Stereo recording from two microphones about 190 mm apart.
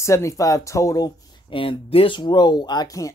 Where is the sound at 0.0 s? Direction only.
15° left (ahead or behind).